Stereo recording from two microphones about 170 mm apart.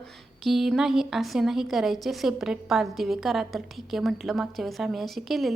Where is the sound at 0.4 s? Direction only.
Centre (ahead or behind).